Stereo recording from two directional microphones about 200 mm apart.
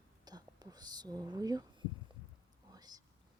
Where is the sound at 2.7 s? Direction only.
20° right (ahead or behind).